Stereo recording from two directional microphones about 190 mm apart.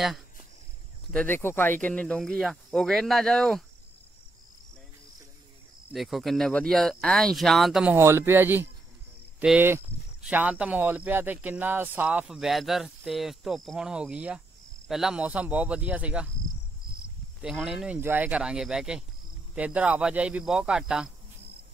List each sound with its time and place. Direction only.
1.1 s speech: 10° left (ahead or behind)
5.9 s speech: centre (ahead or behind)
17.4 s speech: 5° right (ahead or behind)